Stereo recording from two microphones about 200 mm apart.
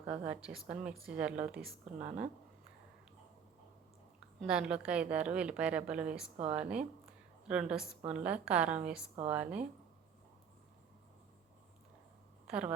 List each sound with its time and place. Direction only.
0.3 s a woman's voice: 5° right (ahead or behind)
1.8 s speech: 35° right (ahead or behind)
4.4 s a woman's voice: 5° right (ahead or behind)
12.5 s a woman's voice: 5° right (ahead or behind)